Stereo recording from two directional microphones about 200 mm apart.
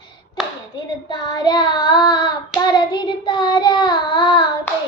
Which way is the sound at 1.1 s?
20° left (ahead or behind).